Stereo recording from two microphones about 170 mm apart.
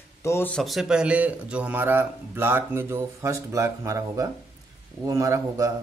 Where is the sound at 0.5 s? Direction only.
Centre (ahead or behind); by 5.7 s 20° right (ahead or behind).